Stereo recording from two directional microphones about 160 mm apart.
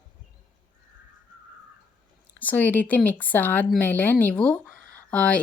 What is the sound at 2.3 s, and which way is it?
Speech, 10° left (ahead or behind).